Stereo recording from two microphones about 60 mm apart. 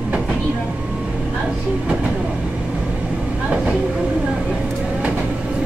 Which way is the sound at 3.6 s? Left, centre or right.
Centre.